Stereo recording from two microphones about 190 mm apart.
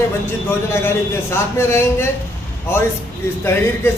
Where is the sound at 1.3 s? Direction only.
15° left (ahead or behind).